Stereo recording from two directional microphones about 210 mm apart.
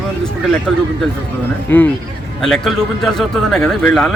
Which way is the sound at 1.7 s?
10° left (ahead or behind).